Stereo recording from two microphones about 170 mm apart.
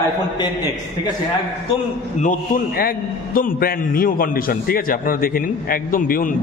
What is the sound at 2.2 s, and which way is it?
A man's voice, 50° left (ahead or behind).